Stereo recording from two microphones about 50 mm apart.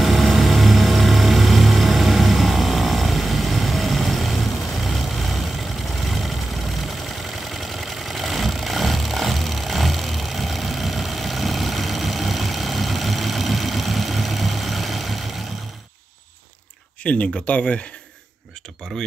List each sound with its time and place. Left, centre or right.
0.0 s vehicle: centre
7.4 s vehicle: centre
17.0 s speech: left